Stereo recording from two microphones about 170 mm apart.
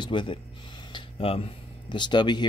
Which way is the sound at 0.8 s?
30° left (ahead or behind).